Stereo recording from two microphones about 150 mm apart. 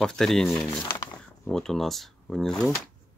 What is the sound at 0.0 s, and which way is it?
Speech, 5° left (ahead or behind).